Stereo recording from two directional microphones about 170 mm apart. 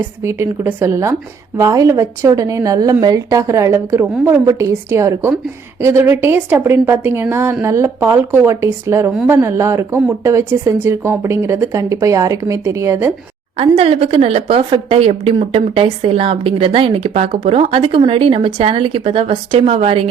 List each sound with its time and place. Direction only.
0.2 s speech: 15° right (ahead or behind)
13.6 s a woman's voice: 35° right (ahead or behind)